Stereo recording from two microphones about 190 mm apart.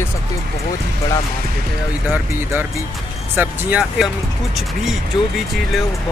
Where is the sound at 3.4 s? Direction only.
5° right (ahead or behind).